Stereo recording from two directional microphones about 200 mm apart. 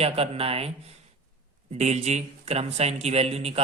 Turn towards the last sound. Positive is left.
turn(degrees=-30)  # may be behind; listen again after turning